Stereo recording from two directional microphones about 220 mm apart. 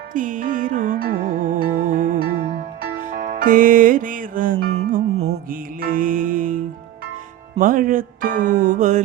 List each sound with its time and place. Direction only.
0.1 s music: 35° right (ahead or behind)
7.6 s speech: 40° right (ahead or behind)